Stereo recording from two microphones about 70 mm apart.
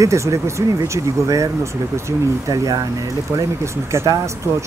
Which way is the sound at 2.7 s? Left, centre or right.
Right.